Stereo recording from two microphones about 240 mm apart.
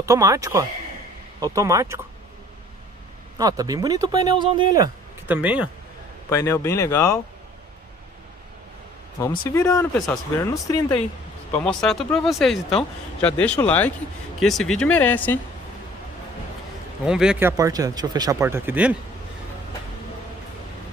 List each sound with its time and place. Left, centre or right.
0.0 s speech: centre
3.3 s speech: centre
6.3 s speech: centre
9.5 s speech: centre
11.5 s speech: centre
17.0 s speech: centre